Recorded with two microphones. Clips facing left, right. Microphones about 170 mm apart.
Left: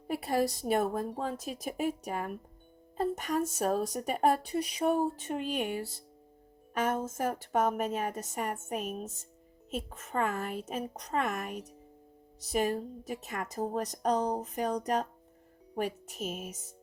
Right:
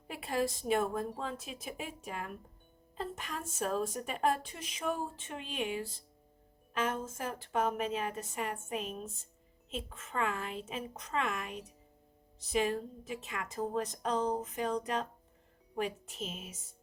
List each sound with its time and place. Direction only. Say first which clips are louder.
0.1 s a woman's voice: left 4 dB; 35° left (ahead or behind)
6.9 s a woman's voice: left 6 dB; 45° left (ahead or behind)